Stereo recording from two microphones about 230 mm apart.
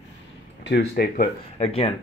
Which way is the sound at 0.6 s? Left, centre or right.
Left.